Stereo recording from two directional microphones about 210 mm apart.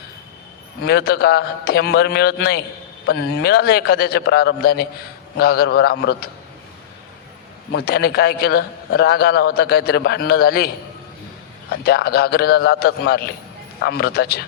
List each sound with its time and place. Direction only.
0.9 s a man's voice: 50° left (ahead or behind)
7.7 s a man's voice: 50° left (ahead or behind)
11.7 s a man's voice: 50° left (ahead or behind)